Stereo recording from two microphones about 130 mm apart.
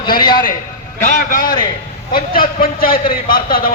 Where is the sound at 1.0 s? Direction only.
85° left.